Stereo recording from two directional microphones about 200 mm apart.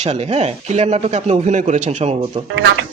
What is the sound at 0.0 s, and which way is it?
Speech, 35° right (ahead or behind).